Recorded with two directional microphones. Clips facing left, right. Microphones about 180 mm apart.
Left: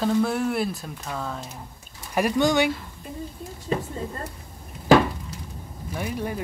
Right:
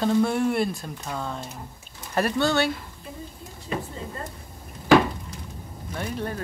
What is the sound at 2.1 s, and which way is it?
Speech, 15° left (ahead or behind).